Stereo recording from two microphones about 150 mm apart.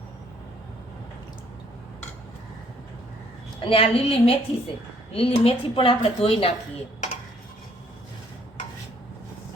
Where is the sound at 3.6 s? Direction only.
40° left (ahead or behind).